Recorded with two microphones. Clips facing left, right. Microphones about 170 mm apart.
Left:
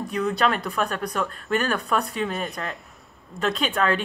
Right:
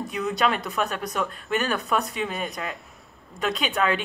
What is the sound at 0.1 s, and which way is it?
Speech, 20° right (ahead or behind).